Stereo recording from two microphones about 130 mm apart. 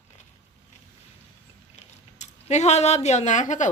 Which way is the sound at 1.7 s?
60° left (ahead or behind).